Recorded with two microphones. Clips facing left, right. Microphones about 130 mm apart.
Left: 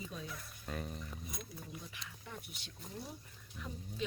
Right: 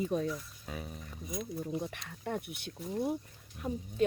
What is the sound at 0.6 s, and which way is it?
Speech, 5° right (ahead or behind).